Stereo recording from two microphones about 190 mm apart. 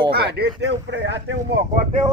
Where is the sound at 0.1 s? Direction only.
55° right (ahead or behind).